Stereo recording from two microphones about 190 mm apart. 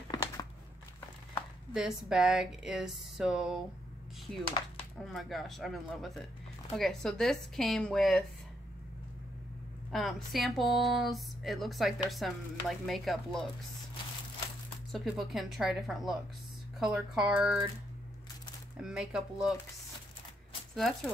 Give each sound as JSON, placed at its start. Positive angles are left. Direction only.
{"t": 0.1, "sound": "a sound", "side_deg": 20}
{"t": 1.7, "sound": "speech", "side_deg": -5}
{"t": 5.0, "sound": "speech", "side_deg": 0}
{"t": 9.8, "sound": "speech", "side_deg": 0}
{"t": 14.9, "sound": "speech", "side_deg": 0}
{"t": 18.8, "sound": "speech", "side_deg": -5}
{"t": 20.7, "sound": "speech", "side_deg": 0}